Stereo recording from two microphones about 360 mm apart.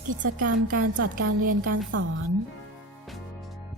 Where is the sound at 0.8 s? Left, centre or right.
Right.